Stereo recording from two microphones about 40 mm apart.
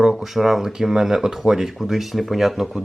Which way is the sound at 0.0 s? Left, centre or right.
Centre.